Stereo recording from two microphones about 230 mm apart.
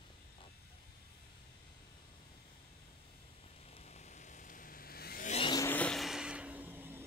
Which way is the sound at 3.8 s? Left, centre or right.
Left.